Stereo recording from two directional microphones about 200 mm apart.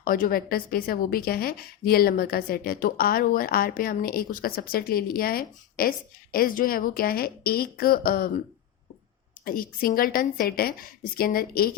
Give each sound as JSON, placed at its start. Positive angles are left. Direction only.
{"t": 0.0, "sound": "a woman's voice", "side_deg": 45}
{"t": 9.4, "sound": "a woman's voice", "side_deg": 45}